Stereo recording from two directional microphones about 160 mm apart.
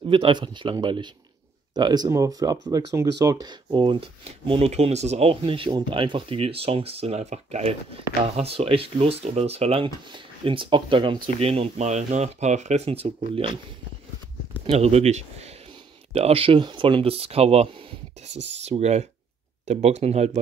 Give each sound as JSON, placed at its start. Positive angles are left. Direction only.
{"t": 0.1, "sound": "speech", "side_deg": -30}
{"t": 14.7, "sound": "speech", "side_deg": -40}
{"t": 18.3, "sound": "speech", "side_deg": -90}
{"t": 18.6, "sound": "speech", "side_deg": -45}